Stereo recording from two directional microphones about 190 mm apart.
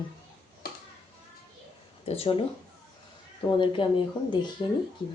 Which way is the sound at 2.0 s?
35° left (ahead or behind).